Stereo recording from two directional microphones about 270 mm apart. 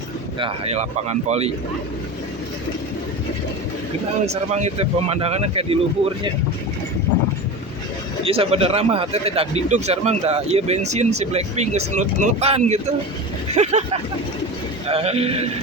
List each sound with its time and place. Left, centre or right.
0.3 s speech: right
4.3 s speech: right
8.2 s speech: right